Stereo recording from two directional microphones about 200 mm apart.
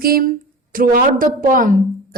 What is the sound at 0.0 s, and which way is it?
A woman's voice, 45° right (ahead or behind).